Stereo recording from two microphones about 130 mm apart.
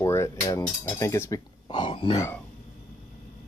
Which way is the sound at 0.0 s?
20° left (ahead or behind).